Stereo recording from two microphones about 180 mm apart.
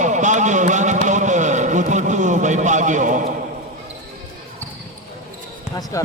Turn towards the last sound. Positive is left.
turn(degrees=15)  # may be behind; listen again after turning